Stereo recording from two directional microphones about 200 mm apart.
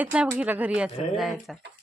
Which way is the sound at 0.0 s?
5° right (ahead or behind).